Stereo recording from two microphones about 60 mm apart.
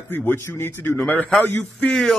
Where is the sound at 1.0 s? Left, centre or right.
Left.